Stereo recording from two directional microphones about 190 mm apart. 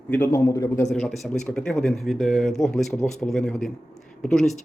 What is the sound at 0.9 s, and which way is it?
Speech, centre (ahead or behind).